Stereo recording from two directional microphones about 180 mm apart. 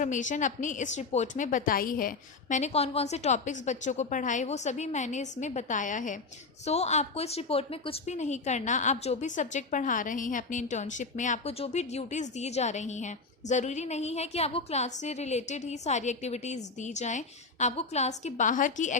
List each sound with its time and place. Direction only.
0.0 s a woman's voice: 45° left (ahead or behind)